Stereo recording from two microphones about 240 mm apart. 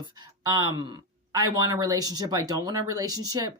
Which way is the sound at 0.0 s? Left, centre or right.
Centre.